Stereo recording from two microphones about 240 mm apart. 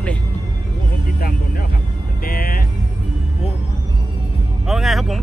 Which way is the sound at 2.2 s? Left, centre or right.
Left.